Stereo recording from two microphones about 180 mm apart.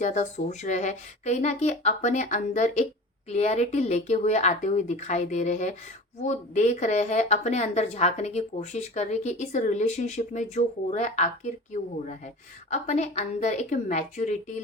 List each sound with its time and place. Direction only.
0.0 s a woman's voice: 40° left (ahead or behind)
12.7 s a woman's voice: 40° left (ahead or behind)